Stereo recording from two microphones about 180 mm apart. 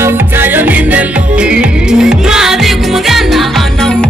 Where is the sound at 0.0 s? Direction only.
10° right (ahead or behind).